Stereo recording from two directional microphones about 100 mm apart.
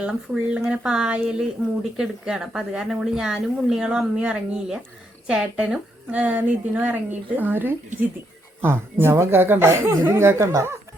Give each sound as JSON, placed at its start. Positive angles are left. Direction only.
{"t": 0.0, "sound": "a woman's voice", "side_deg": -10}